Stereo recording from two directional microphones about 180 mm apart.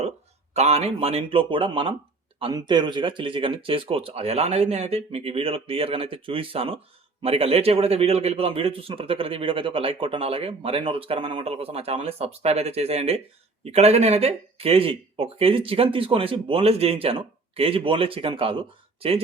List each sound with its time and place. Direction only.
0.5 s a man's voice: 35° right (ahead or behind)